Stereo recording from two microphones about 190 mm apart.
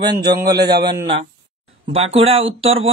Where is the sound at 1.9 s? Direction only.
30° right (ahead or behind).